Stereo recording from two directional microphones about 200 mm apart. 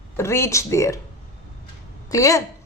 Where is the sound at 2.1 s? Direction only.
15° left (ahead or behind).